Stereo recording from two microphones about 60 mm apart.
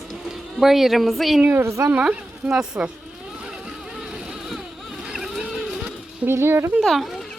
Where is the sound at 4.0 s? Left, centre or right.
Centre.